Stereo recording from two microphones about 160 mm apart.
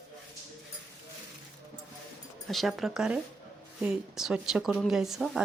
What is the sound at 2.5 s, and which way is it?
A woman's voice, centre (ahead or behind).